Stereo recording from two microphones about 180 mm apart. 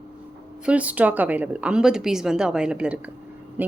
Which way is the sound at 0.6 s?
5° right (ahead or behind).